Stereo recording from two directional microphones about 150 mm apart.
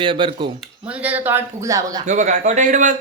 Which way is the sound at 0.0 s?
35° right (ahead or behind).